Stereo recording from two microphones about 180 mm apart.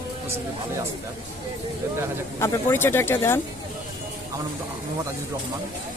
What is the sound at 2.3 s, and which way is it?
Speech, 15° left (ahead or behind).